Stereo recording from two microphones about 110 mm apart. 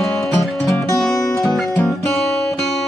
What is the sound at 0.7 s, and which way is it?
Music, 30° left (ahead or behind).